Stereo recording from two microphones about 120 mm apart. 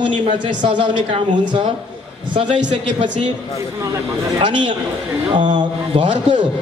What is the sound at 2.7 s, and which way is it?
Speech, 45° right (ahead or behind).